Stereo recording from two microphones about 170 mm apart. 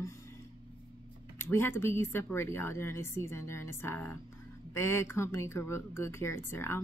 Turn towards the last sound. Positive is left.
turn(degrees=15)  # may be behind; listen again after turning